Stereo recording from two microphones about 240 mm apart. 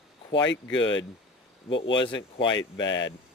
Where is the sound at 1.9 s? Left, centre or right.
Centre.